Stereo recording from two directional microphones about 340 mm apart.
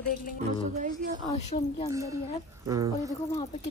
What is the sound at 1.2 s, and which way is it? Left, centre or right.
Speech, centre.